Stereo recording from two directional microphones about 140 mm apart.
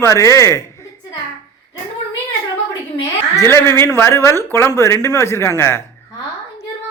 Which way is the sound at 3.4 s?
20° left (ahead or behind).